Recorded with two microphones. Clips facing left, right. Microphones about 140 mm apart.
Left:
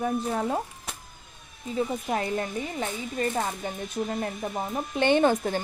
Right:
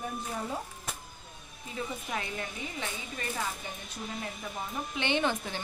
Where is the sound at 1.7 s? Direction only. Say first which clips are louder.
Left 9 dB; 40° left (ahead or behind).